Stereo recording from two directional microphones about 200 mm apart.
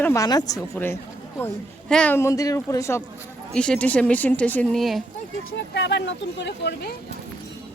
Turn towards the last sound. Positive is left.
turn(degrees=55)  # may be behind; listen again after turning